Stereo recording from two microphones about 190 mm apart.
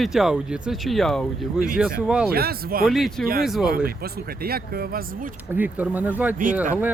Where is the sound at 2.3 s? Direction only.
55° right (ahead or behind).